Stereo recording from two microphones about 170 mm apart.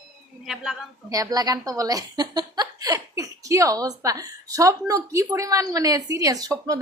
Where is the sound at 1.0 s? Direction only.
20° right (ahead or behind).